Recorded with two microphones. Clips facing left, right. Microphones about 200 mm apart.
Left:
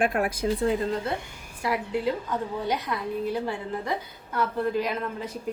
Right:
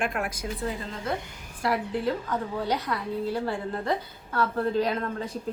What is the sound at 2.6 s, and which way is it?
A woman's voice, 20° left (ahead or behind).